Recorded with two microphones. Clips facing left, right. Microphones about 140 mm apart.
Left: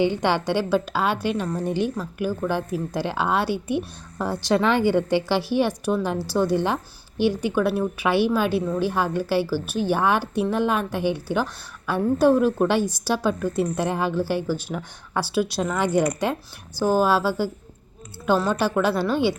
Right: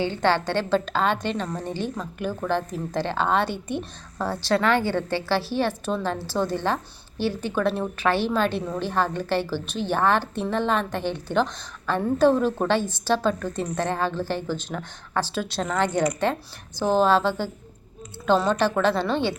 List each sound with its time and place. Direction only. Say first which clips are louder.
0.0 s a woman's voice: left 1 dB; 15° left (ahead or behind)